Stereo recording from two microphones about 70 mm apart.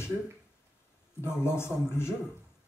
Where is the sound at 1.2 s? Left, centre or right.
Left.